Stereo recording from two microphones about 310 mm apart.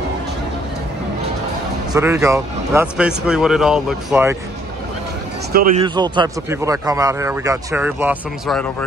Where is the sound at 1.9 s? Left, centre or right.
Centre.